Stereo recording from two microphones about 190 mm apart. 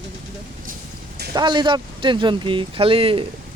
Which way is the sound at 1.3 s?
25° right (ahead or behind).